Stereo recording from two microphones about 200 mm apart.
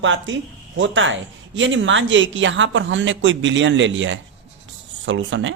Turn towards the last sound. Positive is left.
turn(degrees=-70)  # may be behind; listen again after turning